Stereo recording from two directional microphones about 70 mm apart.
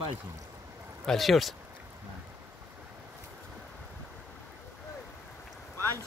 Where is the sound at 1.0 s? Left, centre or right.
Centre.